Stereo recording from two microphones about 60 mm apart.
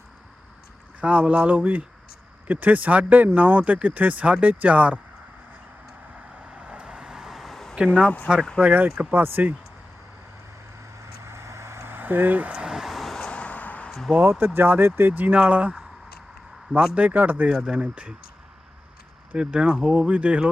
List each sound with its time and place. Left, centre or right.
1.0 s speech: right
6.1 s vehicle: centre
8.0 s speech: left
8.4 s speech: centre
8.6 s speech: right
11.0 s vehicle: right; by 12.7 s centre
12.7 s vehicle: centre
13.1 s vehicle: centre
14.2 s speech: right
16.8 s speech: right
17.5 s speech: centre
19.3 s speech: centre